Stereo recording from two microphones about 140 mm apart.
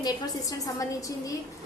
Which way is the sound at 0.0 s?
25° left (ahead or behind).